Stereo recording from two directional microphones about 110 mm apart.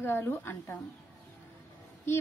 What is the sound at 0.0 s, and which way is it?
Speech, 20° left (ahead or behind).